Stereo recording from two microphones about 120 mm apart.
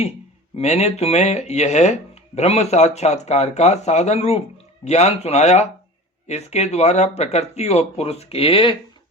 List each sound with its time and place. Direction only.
0.5 s speech: 65° left (ahead or behind); by 8.7 s 50° left (ahead or behind)